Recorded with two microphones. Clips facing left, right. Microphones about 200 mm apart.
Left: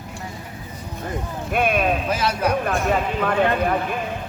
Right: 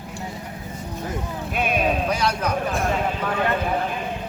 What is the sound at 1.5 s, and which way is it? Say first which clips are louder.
Speech: left 4 dB; 55° left (ahead or behind).